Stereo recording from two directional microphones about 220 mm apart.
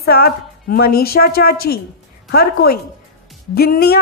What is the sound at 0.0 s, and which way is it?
A woman's voice, 45° left (ahead or behind).